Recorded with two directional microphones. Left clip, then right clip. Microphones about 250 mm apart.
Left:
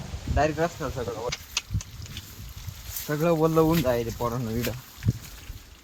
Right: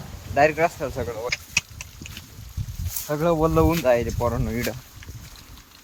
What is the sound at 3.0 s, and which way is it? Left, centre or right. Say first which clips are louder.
Speech: right 2 dB; centre.